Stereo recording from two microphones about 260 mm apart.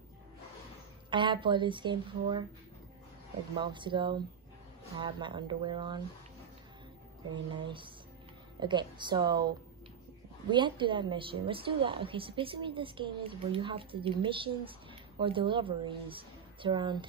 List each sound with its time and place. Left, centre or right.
1.1 s speech: centre
3.5 s speech: centre
7.6 s a woman's voice: centre
10.5 s a woman's voice: centre